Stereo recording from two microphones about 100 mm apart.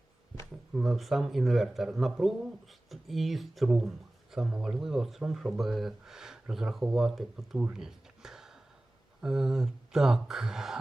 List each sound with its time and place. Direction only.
0.7 s speech: centre (ahead or behind)
7.6 s a sound: 5° right (ahead or behind)
9.2 s speech: 5° right (ahead or behind)